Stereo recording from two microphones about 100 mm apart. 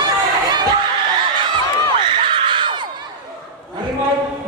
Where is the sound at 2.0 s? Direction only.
55° right (ahead or behind).